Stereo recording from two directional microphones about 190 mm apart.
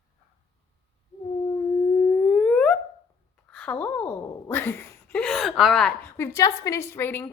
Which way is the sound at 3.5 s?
5° left (ahead or behind).